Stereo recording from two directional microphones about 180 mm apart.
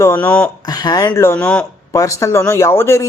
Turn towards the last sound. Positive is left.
turn(degrees=15)  # may be behind; listen again after turning